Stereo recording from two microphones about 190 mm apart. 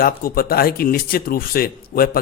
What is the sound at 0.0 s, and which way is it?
Speech, 50° left (ahead or behind).